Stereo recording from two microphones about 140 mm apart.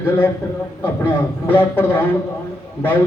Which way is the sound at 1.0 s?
15° left (ahead or behind).